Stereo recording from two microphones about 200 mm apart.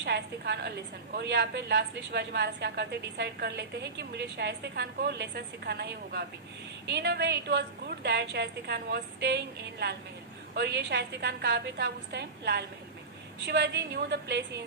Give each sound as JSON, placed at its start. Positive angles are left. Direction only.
{"t": 0.0, "sound": "a woman's voice", "side_deg": -55}